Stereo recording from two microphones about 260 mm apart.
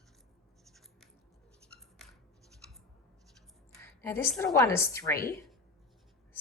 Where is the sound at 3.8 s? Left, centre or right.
Centre.